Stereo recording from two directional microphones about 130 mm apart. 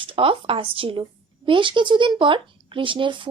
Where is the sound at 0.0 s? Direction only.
40° right (ahead or behind).